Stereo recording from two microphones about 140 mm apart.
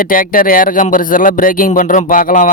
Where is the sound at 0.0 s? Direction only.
85° left.